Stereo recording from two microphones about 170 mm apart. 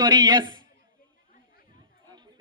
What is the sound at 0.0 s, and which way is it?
Speech, 25° right (ahead or behind).